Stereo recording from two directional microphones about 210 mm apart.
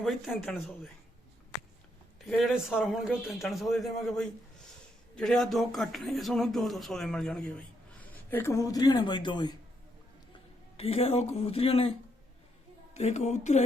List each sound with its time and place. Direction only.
0.0 s speech: centre (ahead or behind)
2.2 s speech: centre (ahead or behind); by 9.6 s 20° left (ahead or behind)
10.8 s speech: 30° left (ahead or behind)